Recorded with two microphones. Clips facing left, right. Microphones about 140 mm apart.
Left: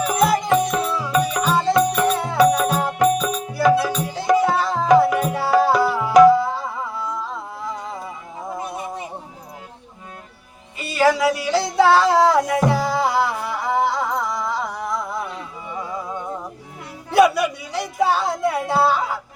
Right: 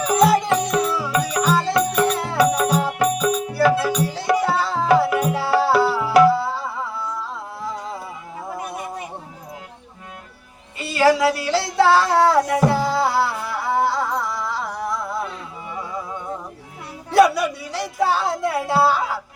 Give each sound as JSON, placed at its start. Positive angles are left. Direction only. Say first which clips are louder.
{"t": 0.0, "sound": "music", "louder": "right 2 dB", "side_deg": 0}
{"t": 4.4, "sound": "tabla", "louder": "left 1 dB", "side_deg": -5}
{"t": 8.5, "sound": "music", "louder": "left 1 dB", "side_deg": 25}
{"t": 10.8, "sound": "a sound", "louder": "right 1 dB", "side_deg": 0}
{"t": 13.7, "sound": "music", "louder": "even", "side_deg": -5}
{"t": 17.1, "sound": "a sound", "louder": "even", "side_deg": 0}